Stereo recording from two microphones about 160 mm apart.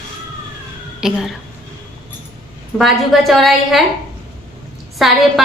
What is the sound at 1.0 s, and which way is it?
Speech, centre (ahead or behind).